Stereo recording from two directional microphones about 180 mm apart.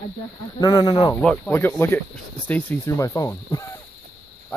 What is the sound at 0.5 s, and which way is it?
Speech, 25° left (ahead or behind).